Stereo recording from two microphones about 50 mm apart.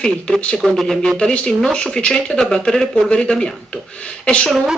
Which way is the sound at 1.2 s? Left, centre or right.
Centre.